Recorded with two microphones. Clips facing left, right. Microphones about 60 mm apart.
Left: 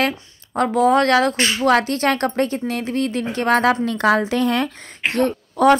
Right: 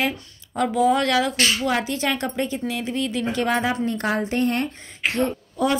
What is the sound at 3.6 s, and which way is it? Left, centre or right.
A woman's voice, left.